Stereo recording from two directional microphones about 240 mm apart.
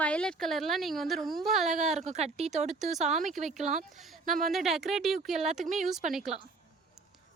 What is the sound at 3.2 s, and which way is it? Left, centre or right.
Speech, centre.